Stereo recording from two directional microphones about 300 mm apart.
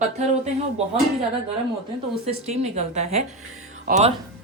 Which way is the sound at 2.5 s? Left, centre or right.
Right.